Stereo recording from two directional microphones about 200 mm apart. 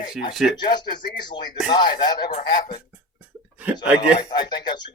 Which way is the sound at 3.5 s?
10° right (ahead or behind).